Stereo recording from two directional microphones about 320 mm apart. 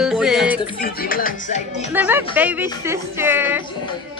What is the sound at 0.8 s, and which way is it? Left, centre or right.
Speech, left.